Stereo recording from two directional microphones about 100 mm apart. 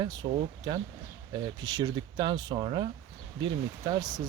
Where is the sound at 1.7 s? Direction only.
45° right (ahead or behind).